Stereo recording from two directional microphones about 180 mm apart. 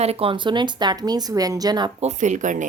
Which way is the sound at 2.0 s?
40° right (ahead or behind).